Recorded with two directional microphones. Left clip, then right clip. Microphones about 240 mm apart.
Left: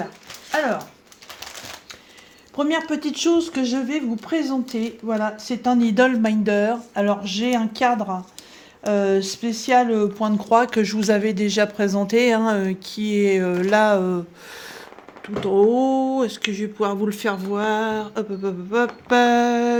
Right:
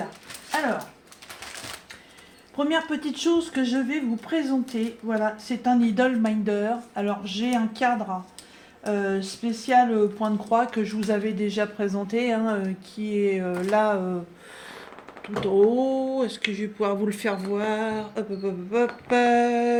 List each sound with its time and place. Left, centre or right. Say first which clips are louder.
2.6 s speech: left 3 dB; left
15.5 s speech: left 4 dB; left